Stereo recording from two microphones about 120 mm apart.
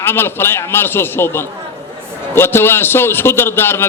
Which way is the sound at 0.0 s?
20° left (ahead or behind).